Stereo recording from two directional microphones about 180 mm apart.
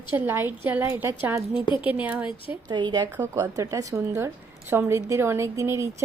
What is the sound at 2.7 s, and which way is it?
Speech, 25° right (ahead or behind).